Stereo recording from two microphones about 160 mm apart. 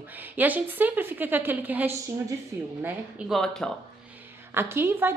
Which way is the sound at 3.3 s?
5° left (ahead or behind).